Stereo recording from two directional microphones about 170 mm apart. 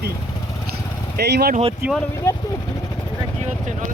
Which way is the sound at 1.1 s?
70° right (ahead or behind).